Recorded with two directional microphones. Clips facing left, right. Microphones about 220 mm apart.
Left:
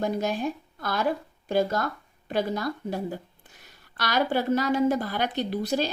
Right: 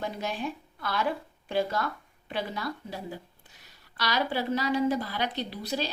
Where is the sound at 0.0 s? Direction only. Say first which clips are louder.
Left 6 dB; 45° left (ahead or behind).